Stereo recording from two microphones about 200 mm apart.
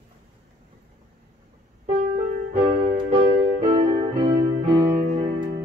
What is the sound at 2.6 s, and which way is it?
Music, 30° right (ahead or behind).